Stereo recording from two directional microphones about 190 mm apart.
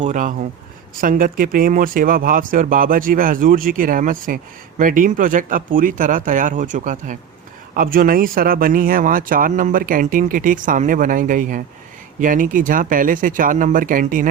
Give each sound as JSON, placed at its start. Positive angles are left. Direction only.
{"t": 0.0, "sound": "speech", "side_deg": -40}